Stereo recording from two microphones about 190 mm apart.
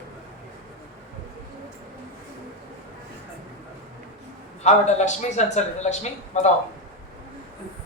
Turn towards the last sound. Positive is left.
turn(degrees=35)  # may be behind; listen again after turning